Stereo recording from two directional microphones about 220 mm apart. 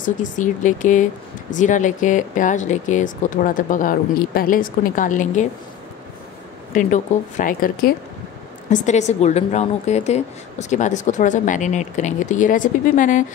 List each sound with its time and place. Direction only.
0.0 s a woman's voice: 35° left (ahead or behind)
6.7 s a woman's voice: 35° left (ahead or behind)